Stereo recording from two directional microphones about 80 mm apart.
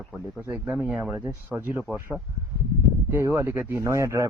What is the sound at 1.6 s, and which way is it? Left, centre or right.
Speech, right.